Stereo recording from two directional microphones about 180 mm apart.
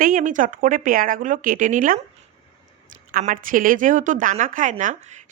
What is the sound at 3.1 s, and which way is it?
A woman's voice, 50° right (ahead or behind).